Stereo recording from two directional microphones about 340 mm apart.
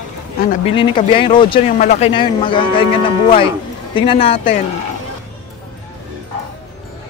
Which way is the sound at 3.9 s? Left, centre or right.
Centre.